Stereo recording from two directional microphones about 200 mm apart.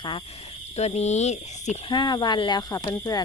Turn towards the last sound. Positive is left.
turn(degrees=20)  # may be behind; listen again after turning